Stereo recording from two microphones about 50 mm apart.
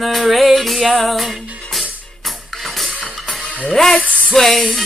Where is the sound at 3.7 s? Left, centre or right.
Centre.